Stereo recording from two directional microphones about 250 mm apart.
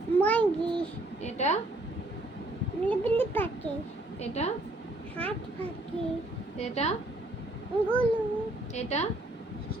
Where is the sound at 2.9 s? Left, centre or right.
Centre.